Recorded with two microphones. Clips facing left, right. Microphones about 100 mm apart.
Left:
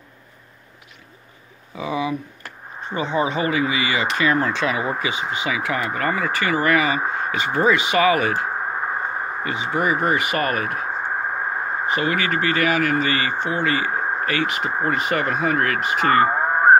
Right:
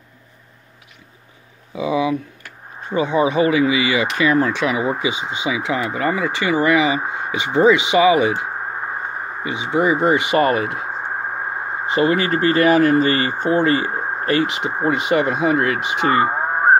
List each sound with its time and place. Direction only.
1.8 s speech: 15° right (ahead or behind)
16.3 s radio: 5° right (ahead or behind)